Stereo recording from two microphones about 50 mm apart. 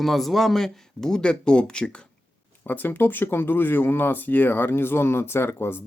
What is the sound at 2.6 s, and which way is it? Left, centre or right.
Speech, left.